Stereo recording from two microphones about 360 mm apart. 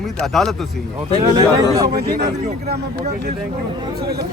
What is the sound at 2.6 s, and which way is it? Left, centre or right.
Speech, right.